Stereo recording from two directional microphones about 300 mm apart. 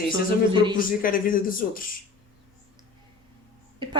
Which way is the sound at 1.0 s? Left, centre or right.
Left.